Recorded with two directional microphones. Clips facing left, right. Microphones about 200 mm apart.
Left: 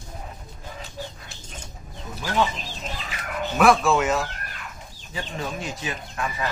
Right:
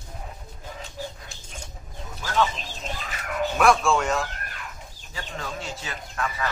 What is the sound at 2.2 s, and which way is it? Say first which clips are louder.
Speech: left 1 dB; 20° left (ahead or behind).